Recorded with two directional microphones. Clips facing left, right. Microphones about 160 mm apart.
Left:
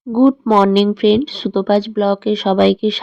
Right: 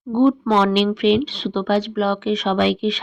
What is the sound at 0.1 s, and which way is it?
Speech, 45° left (ahead or behind).